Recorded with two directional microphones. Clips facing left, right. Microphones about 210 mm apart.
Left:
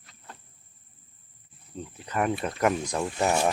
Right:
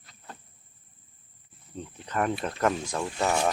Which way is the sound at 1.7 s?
5° left (ahead or behind).